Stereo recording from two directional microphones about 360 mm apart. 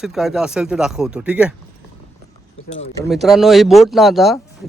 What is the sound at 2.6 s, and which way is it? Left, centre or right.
Speech, left.